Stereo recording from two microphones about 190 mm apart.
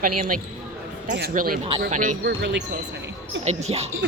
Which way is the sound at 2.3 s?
65° right (ahead or behind).